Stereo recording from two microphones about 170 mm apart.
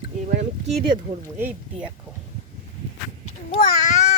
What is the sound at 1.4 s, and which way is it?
Speech, 10° right (ahead or behind).